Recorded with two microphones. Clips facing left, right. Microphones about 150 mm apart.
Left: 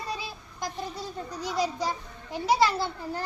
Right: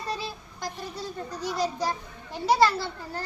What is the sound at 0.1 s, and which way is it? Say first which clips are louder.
Child singing: right 2 dB; 15° left (ahead or behind).